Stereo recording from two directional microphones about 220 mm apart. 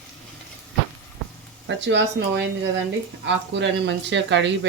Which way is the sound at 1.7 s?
55° right (ahead or behind).